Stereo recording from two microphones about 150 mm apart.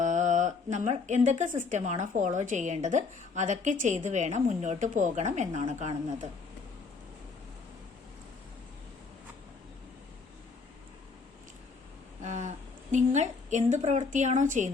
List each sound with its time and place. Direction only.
0.0 s speech: 55° right (ahead or behind)
12.2 s a woman's voice: 55° right (ahead or behind)